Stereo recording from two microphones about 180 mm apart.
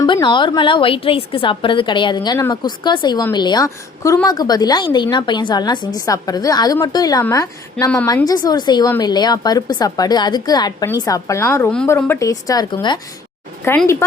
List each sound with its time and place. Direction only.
0.0 s a woman's voice: 25° left (ahead or behind)
11.7 s a woman's voice: 5° left (ahead or behind)